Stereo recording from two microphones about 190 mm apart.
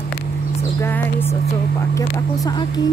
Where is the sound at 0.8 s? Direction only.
10° left (ahead or behind).